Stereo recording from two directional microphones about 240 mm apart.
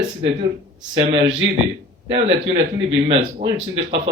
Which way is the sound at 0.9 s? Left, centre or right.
Centre.